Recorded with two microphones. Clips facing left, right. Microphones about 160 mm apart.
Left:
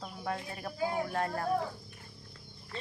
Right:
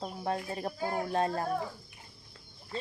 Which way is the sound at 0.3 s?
30° right (ahead or behind).